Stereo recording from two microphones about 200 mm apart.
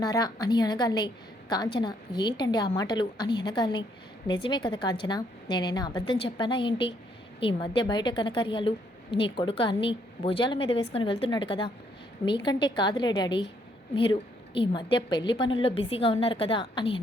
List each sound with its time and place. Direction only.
0.0 s a woman's voice: 20° left (ahead or behind)